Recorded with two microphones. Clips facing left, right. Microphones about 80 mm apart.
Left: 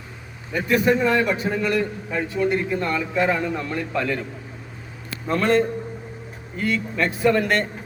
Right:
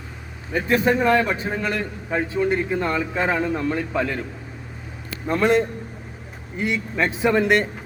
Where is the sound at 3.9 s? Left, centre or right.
Centre.